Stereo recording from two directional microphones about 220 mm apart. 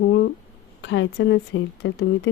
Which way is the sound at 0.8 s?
55° left (ahead or behind).